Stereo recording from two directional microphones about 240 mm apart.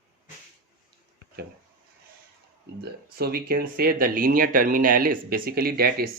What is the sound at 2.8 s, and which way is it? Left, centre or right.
Speech, right.